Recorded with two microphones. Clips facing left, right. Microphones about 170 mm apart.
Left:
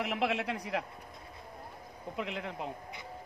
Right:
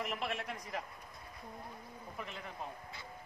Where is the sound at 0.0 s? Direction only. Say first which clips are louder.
Left 7 dB; 75° left (ahead or behind).